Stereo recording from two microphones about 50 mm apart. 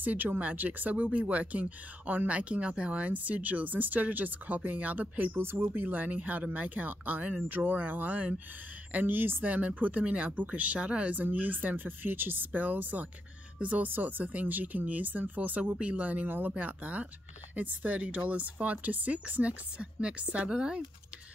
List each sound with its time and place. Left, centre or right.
0.0 s speech: right
5.3 s speech: right; by 20.8 s centre